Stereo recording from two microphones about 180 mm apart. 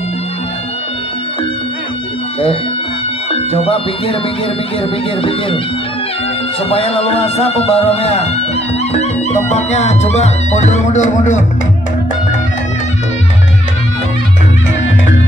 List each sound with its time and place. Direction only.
3.3 s speech: 35° left (ahead or behind)
6.7 s music: 30° left (ahead or behind)